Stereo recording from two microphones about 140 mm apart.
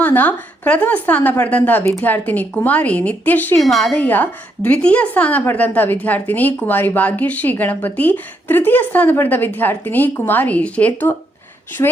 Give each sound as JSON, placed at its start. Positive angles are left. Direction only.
{"t": 0.0, "sound": "a woman's voice", "side_deg": 10}
{"t": 3.6, "sound": "a woman's voice", "side_deg": 0}
{"t": 4.0, "sound": "a woman's voice", "side_deg": 10}
{"t": 11.8, "sound": "a woman's voice", "side_deg": 25}